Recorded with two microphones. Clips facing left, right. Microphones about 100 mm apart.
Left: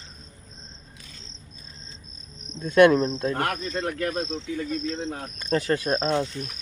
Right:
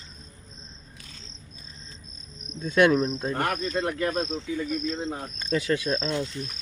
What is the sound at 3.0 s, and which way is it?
Speech, 90° left.